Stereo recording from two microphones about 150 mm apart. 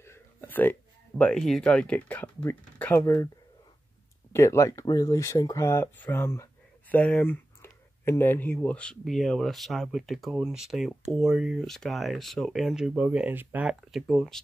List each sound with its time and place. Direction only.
0.0 s speech: 15° left (ahead or behind)
3.0 s speech: 20° left (ahead or behind)
4.3 s speech: 20° left (ahead or behind); by 14.4 s centre (ahead or behind)